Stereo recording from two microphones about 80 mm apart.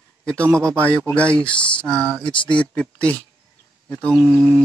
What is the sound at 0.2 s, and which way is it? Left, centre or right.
A man's voice, centre.